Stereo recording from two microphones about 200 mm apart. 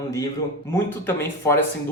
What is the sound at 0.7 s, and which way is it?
Speech, 15° left (ahead or behind).